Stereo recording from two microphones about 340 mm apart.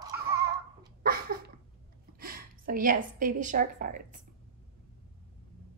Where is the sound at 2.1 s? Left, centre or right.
Right.